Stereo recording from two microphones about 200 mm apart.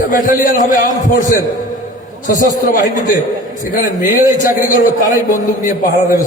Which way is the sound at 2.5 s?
40° left (ahead or behind).